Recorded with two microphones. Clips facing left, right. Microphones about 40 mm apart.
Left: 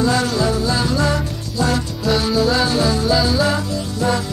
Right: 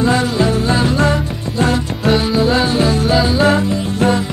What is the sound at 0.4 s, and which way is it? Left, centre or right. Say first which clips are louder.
Music: right 4 dB; right.